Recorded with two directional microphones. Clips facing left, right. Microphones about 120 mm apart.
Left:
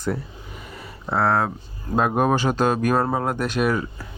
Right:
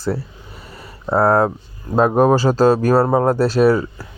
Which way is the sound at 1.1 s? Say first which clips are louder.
Right 6 dB; 40° right (ahead or behind).